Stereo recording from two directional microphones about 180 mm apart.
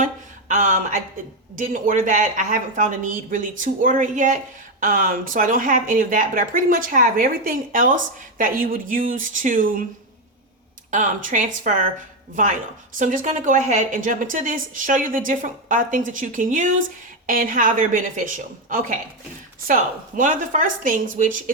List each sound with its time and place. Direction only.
0.0 s a sound: 45° right (ahead or behind)
1.5 s speech: 50° right (ahead or behind)
10.9 s speech: 45° right (ahead or behind)
13.0 s speech: 45° right (ahead or behind)